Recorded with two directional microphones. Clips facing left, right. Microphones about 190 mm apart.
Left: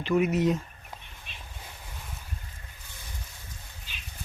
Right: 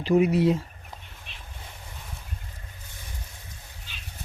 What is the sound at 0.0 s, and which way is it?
Speech, 35° right (ahead or behind).